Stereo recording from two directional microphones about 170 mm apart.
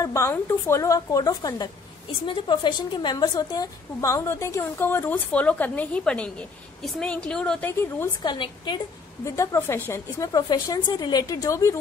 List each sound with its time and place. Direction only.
0.0 s a woman's voice: 20° left (ahead or behind)
8.2 s a woman's voice: 25° left (ahead or behind)